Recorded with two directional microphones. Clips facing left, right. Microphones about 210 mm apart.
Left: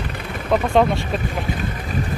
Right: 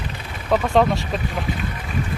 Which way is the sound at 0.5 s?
Centre (ahead or behind).